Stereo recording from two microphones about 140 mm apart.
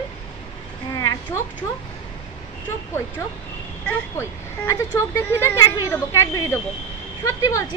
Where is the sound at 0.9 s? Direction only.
25° left (ahead or behind).